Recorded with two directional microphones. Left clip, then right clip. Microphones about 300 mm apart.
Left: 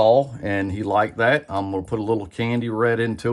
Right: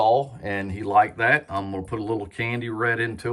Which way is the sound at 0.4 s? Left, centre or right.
Centre.